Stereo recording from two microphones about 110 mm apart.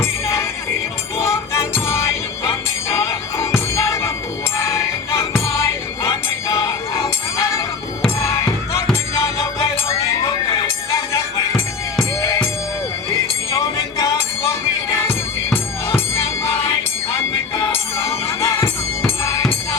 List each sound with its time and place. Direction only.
1.7 s music: 25° left (ahead or behind)
3.3 s music: 25° left (ahead or behind)
6.5 s music: 30° left (ahead or behind)
12.2 s music: 25° left (ahead or behind)
13.5 s music: 30° left (ahead or behind)
17.9 s music: 25° left (ahead or behind)